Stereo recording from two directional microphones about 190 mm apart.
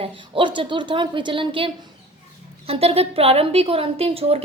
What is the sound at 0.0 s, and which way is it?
A woman's voice, 25° right (ahead or behind).